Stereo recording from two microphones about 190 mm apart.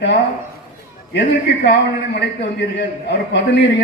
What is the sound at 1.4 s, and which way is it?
A man's voice, 65° left (ahead or behind).